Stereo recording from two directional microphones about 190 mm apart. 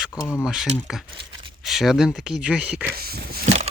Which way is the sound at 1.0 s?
25° right (ahead or behind).